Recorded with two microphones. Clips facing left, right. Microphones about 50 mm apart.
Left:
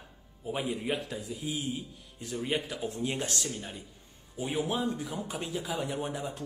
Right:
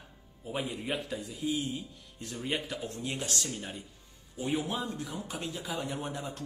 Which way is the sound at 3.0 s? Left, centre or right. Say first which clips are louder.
Left 3 dB; left.